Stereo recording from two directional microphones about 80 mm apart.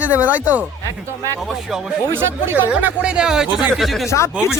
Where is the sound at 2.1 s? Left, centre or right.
Right; by 4.0 s centre.